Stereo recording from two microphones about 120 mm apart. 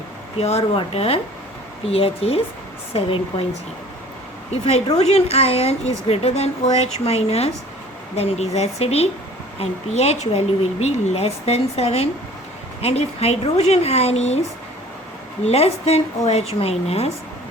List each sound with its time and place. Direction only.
0.3 s a woman's voice: 60° left (ahead or behind)
4.9 s a woman's voice: 60° left (ahead or behind)
15.4 s a woman's voice: 60° left (ahead or behind)